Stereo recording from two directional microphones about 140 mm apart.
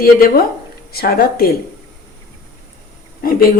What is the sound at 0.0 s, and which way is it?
Speech, 90° left.